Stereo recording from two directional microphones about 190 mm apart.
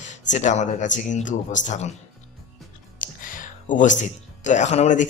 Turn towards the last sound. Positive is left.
turn(degrees=40)  # may be behind; listen again after turning